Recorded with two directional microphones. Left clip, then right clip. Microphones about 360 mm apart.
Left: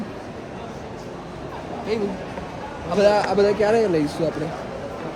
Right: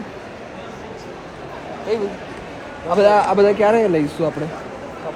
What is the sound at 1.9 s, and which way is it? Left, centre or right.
Speech, centre.